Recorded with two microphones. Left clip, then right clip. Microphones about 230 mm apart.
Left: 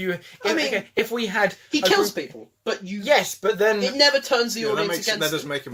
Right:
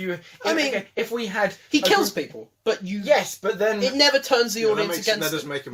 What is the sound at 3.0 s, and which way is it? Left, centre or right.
Speech, left.